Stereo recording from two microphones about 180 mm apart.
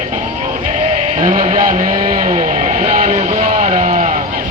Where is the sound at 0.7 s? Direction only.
40° right (ahead or behind).